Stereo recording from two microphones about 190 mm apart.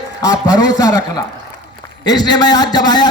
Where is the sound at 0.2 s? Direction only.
20° left (ahead or behind).